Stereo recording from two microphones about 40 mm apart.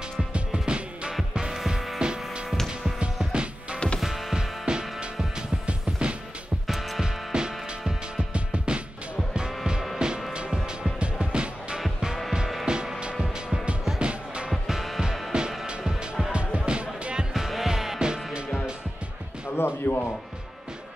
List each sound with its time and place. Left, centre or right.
0.3 s music: right
1.3 s music: centre
2.0 s music: centre
4.0 s music: centre; by 8.8 s right
9.9 s music: centre
13.9 s music: right
14.7 s music: centre
15.3 s music: right
17.3 s music: centre
17.9 s music: right
19.5 s music: left